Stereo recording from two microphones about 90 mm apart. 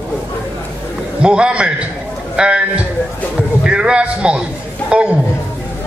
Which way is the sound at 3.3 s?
10° right (ahead or behind).